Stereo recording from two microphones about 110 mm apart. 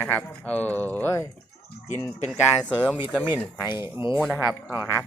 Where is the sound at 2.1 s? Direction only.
90° left.